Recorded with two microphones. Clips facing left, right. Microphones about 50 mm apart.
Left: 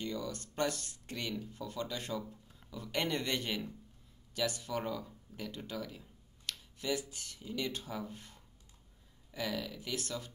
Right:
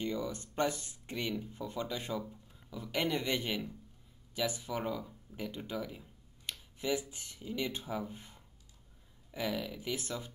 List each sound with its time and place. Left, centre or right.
0.0 s speech: centre